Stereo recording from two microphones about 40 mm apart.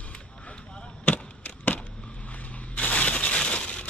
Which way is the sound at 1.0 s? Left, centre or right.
Left.